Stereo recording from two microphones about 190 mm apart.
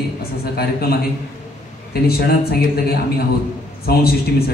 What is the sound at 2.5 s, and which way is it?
A man's voice, 55° left (ahead or behind).